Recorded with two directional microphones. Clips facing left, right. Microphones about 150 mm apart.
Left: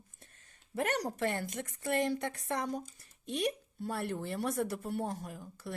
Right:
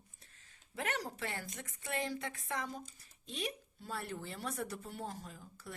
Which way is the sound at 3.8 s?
60° left (ahead or behind).